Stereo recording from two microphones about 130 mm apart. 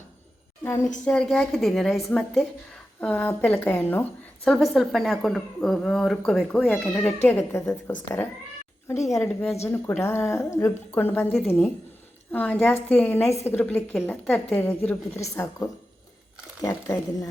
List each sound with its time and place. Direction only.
0.6 s a woman's voice: 20° left (ahead or behind)
1.0 s a woman's voice: 5° left (ahead or behind); by 17.2 s 25° left (ahead or behind)